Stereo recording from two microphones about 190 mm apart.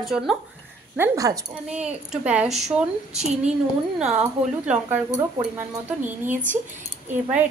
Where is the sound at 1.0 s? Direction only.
15° right (ahead or behind).